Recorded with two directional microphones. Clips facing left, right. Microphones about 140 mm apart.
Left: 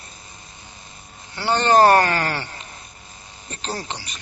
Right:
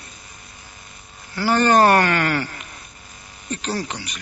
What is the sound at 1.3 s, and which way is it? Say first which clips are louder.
Speech: right 1 dB; 25° left (ahead or behind).